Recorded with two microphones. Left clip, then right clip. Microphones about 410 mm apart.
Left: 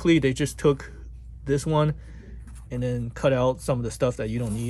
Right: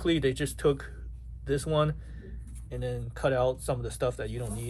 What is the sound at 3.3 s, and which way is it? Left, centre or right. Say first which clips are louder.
Speech: left 5 dB; centre.